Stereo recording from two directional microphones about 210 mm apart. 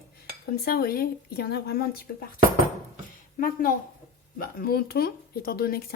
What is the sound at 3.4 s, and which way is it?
Speech, 40° left (ahead or behind).